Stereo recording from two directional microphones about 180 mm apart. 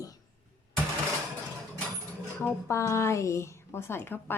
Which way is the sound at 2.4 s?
15° left (ahead or behind).